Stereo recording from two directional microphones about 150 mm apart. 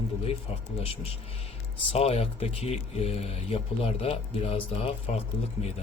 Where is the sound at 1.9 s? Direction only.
40° left (ahead or behind).